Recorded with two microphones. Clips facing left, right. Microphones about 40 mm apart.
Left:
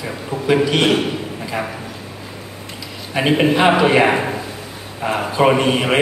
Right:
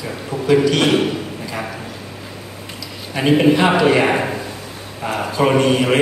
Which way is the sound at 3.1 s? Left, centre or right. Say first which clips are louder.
Right 2 dB; centre.